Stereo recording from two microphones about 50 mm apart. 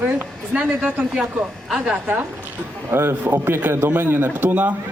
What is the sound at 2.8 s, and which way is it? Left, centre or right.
A man's voice, right.